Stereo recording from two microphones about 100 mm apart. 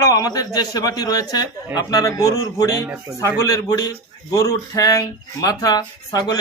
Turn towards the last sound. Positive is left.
turn(degrees=40)  # may be behind; listen again after turning